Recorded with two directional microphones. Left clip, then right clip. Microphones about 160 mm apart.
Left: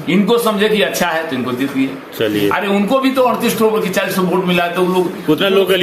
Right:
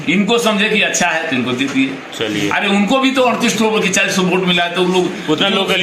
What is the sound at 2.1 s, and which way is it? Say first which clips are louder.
Speech: left 4 dB; 45° left (ahead or behind).